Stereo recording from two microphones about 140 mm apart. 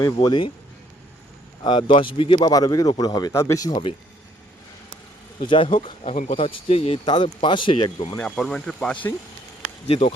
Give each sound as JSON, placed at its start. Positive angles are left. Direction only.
{"t": 0.0, "sound": "speech", "side_deg": 30}
{"t": 1.6, "sound": "speech", "side_deg": 35}
{"t": 2.5, "sound": "speech", "side_deg": 25}
{"t": 5.5, "sound": "speech", "side_deg": 35}
{"t": 6.1, "sound": "speech", "side_deg": 70}
{"t": 6.4, "sound": "speech", "side_deg": 40}
{"t": 8.2, "sound": "speech", "side_deg": 5}
{"t": 9.8, "sound": "speech", "side_deg": 45}